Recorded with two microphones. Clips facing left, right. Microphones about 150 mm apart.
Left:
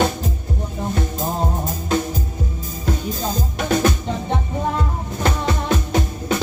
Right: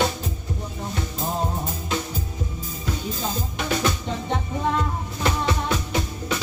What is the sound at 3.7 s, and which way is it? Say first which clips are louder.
Music: left 6 dB; 50° left (ahead or behind).